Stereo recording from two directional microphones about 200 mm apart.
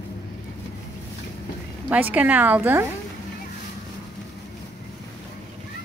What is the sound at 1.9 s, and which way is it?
Speech, 10° right (ahead or behind).